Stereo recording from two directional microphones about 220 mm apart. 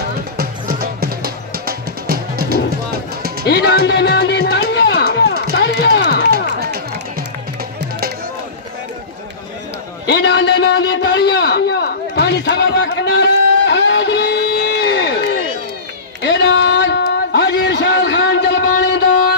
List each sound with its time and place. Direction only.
0.4 s music: 40° right (ahead or behind)
3.4 s music: 50° left (ahead or behind)
5.8 s run: 50° left (ahead or behind)
6.3 s run: 45° right (ahead or behind)
10.1 s a sound: 50° left (ahead or behind)
16.2 s a sound: 55° left (ahead or behind)